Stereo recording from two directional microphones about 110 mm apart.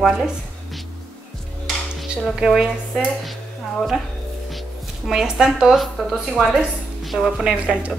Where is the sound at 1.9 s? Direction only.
Centre (ahead or behind).